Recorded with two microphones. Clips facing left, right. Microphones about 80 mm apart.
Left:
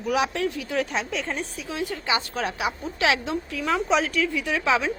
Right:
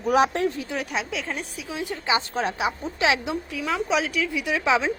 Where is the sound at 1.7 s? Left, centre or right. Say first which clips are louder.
Right 1 dB; right.